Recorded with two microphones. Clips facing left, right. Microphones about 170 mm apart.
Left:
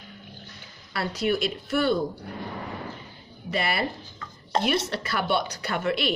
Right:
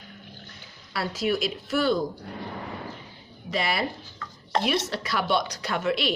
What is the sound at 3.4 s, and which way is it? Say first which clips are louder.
A woman's voice: even; centre (ahead or behind).